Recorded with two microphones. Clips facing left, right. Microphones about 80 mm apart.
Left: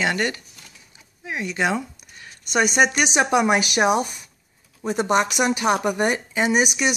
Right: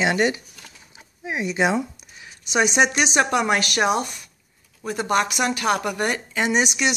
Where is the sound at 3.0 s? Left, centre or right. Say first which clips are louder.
Left 1 dB; centre.